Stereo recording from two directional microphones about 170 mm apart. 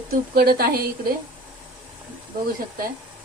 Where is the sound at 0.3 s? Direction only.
60° right (ahead or behind).